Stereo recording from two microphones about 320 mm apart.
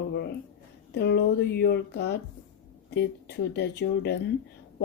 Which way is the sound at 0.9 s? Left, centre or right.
Left.